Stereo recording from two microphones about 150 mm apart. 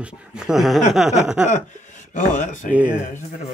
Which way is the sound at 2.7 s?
10° right (ahead or behind).